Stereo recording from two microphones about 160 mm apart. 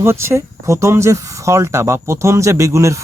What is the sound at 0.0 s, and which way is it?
A man's voice, 15° right (ahead or behind).